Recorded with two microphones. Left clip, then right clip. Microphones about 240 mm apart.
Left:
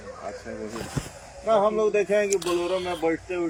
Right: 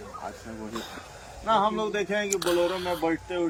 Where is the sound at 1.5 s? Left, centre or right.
Right.